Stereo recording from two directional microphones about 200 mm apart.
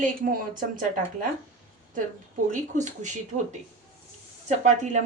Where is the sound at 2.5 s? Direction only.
40° right (ahead or behind).